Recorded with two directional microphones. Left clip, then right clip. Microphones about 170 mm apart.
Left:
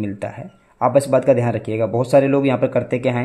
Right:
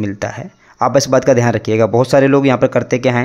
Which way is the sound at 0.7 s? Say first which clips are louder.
Right 3 dB; 20° right (ahead or behind).